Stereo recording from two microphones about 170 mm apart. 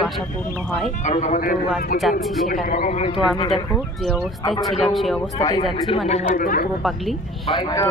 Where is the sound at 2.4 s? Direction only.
50° left (ahead or behind).